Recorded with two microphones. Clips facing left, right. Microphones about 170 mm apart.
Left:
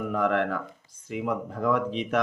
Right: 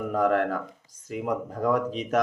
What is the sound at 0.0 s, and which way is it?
A man's voice, 40° right (ahead or behind).